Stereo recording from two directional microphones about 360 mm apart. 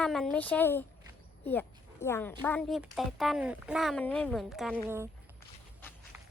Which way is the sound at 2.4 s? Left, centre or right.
Centre.